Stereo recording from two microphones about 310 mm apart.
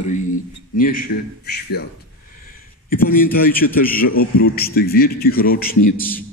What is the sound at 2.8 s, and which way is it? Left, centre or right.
A man's voice, left.